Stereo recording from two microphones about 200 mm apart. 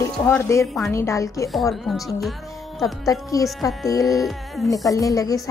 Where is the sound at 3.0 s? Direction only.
15° left (ahead or behind).